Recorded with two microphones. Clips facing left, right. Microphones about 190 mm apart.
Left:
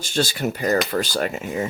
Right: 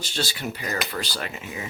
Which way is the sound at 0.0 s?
45° left (ahead or behind).